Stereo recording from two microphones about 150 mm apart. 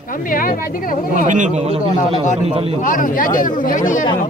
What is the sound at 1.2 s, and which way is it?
A man's voice, 55° right (ahead or behind).